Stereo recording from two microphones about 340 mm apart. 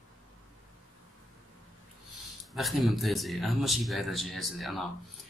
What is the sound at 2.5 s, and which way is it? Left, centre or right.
Speech, centre.